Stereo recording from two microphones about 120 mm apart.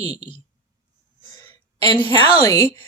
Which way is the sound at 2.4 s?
25° left (ahead or behind).